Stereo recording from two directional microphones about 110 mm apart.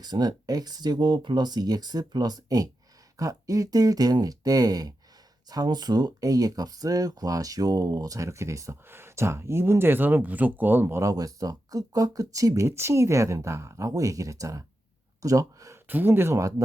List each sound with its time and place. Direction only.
0.0 s speech: 40° right (ahead or behind)
15.9 s speech: 20° right (ahead or behind)